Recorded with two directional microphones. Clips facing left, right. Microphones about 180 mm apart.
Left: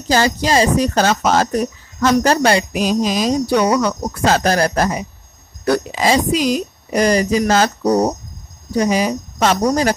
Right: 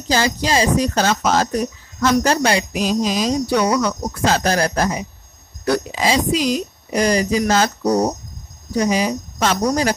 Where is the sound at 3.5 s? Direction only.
40° left (ahead or behind).